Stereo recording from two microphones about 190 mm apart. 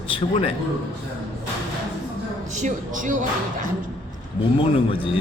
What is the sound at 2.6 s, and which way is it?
Speech, 40° right (ahead or behind).